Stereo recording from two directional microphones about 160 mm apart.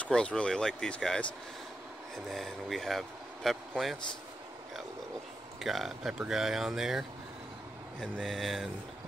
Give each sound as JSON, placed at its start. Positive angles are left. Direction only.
{"t": 0.0, "sound": "speech", "side_deg": 5}
{"t": 2.2, "sound": "speech", "side_deg": 0}
{"t": 5.6, "sound": "speech", "side_deg": 0}